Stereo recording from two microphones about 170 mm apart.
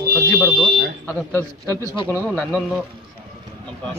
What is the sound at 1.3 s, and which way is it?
Speech, 15° left (ahead or behind).